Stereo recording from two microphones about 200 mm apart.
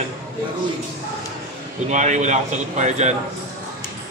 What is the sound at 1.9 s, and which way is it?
Speech, 35° right (ahead or behind).